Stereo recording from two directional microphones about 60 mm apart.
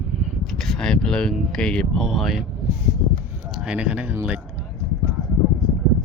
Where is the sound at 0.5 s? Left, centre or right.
Centre.